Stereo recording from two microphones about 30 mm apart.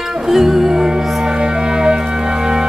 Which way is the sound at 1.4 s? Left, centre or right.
Right.